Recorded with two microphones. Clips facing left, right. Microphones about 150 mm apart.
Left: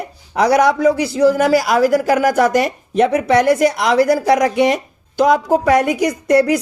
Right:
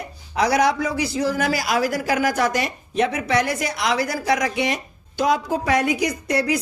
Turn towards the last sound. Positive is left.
turn(degrees=50)  # may be behind; listen again after turning